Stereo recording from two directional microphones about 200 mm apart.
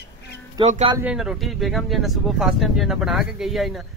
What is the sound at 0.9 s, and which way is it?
Speech, 5° right (ahead or behind).